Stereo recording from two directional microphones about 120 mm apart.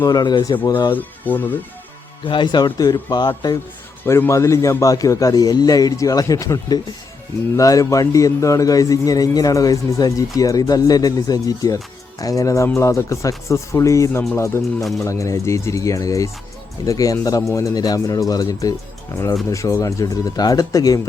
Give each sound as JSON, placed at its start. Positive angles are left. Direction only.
{"t": 0.0, "sound": "speech", "side_deg": 35}
{"t": 0.9, "sound": "speech", "side_deg": 15}
{"t": 2.2, "sound": "speech", "side_deg": 45}
{"t": 4.0, "sound": "speech", "side_deg": 20}